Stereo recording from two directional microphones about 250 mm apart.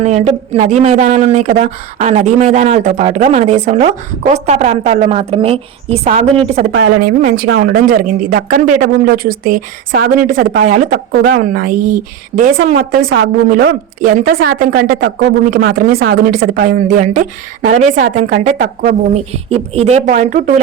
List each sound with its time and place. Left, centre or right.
0.0 s speech: right
6.7 s a woman's voice: right
7.0 s a woman's voice: right